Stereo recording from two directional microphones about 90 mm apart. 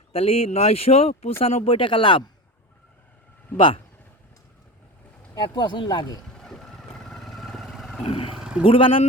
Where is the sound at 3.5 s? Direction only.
85° left.